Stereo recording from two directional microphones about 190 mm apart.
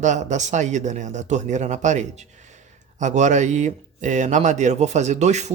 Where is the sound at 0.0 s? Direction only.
40° right (ahead or behind).